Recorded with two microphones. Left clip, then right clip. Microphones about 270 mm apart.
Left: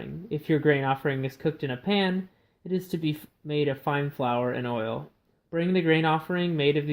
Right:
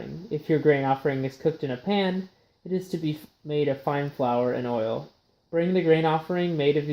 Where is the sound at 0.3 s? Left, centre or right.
Left.